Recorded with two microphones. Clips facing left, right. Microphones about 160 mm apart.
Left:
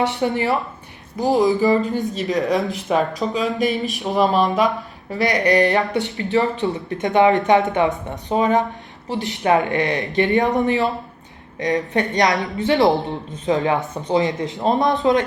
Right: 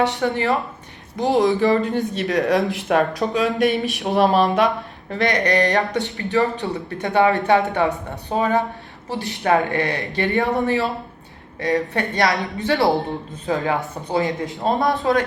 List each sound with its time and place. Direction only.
0.2 s speech: 15° left (ahead or behind)
1.2 s speech: centre (ahead or behind)
5.5 s speech: 15° left (ahead or behind)